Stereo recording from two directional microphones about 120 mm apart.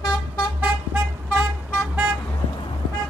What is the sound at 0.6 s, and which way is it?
Vehicle, 15° right (ahead or behind).